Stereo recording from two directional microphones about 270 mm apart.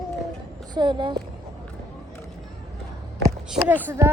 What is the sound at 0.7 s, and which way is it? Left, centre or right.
Speech, centre.